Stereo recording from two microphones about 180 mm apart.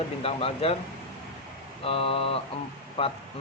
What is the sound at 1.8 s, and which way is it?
Speech, 30° left (ahead or behind).